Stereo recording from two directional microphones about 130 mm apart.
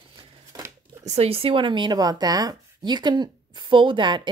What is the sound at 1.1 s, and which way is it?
Speech, 50° right (ahead or behind).